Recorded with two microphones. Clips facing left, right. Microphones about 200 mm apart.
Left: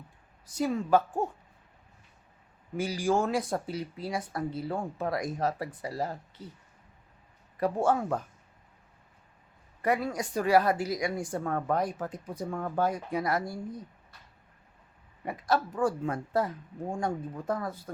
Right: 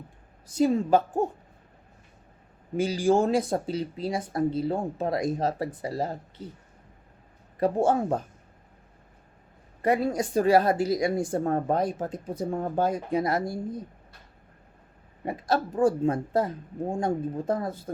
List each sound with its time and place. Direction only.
0.5 s speech: 30° right (ahead or behind)
2.7 s speech: 25° right (ahead or behind)
7.6 s speech: 25° right (ahead or behind)
9.8 s speech: 25° right (ahead or behind)
15.2 s speech: 30° right (ahead or behind)